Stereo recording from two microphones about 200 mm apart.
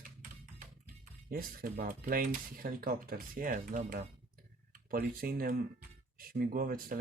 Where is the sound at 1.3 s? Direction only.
45° right (ahead or behind).